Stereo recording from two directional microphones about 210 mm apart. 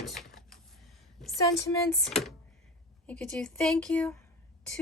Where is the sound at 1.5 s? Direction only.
15° left (ahead or behind).